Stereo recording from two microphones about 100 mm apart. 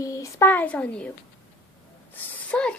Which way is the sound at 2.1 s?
15° left (ahead or behind).